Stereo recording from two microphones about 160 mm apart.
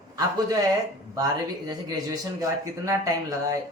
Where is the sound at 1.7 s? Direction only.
20° right (ahead or behind).